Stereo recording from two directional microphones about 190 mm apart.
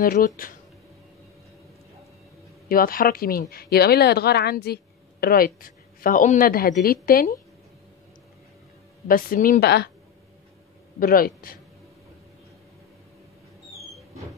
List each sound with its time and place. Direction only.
0.0 s a woman's voice: 45° left (ahead or behind)
2.7 s a woman's voice: 50° left (ahead or behind)
9.0 s a woman's voice: 45° left (ahead or behind)
11.0 s a woman's voice: 50° left (ahead or behind)